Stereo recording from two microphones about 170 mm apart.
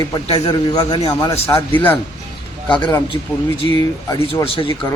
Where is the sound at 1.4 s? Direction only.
15° left (ahead or behind).